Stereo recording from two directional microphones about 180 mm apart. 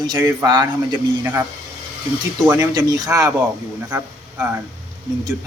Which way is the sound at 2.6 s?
20° right (ahead or behind).